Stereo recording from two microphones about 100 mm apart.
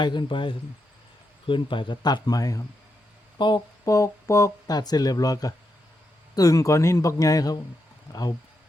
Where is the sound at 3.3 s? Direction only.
50° left (ahead or behind).